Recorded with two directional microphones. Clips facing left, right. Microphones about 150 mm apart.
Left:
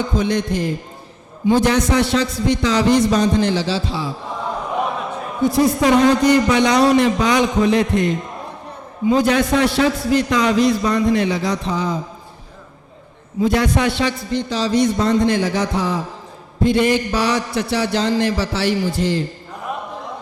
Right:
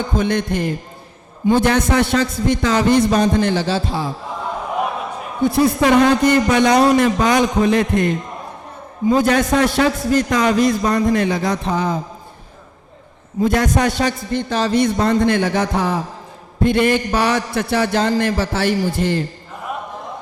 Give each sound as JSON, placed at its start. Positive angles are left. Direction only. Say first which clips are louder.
{"t": 0.2, "sound": "a man's voice", "louder": "right 2 dB", "side_deg": -55}
{"t": 5.4, "sound": "a man's voice", "louder": "right 1 dB", "side_deg": -60}
{"t": 13.4, "sound": "a man's voice", "louder": "even", "side_deg": -45}
{"t": 19.7, "sound": "a sound", "louder": "even", "side_deg": 0}